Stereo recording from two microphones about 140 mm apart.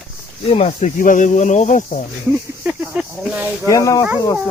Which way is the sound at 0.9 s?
70° left (ahead or behind).